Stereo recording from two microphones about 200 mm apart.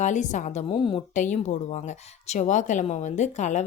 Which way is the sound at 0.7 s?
25° left (ahead or behind).